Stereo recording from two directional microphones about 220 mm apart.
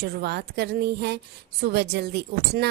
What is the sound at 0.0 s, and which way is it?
A woman's voice, 45° right (ahead or behind).